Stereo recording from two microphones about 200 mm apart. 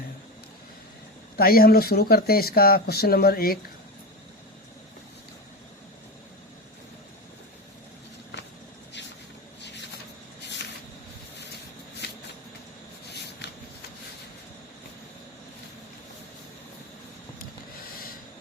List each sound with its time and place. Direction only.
1.4 s speech: 50° left (ahead or behind)
8.9 s vehicle: 60° left (ahead or behind)
13.1 s a sound: 55° left (ahead or behind)